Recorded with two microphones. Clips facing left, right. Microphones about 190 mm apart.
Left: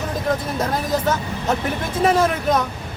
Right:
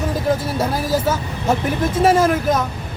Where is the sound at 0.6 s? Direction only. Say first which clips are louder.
Right 2 dB; 5° right (ahead or behind).